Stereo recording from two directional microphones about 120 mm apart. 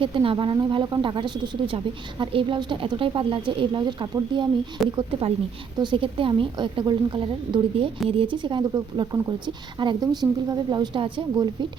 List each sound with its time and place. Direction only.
0.0 s a woman's voice: 45° right (ahead or behind)